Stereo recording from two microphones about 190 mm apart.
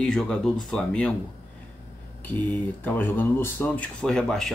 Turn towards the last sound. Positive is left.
turn(degrees=0)  # may be behind; listen again after turning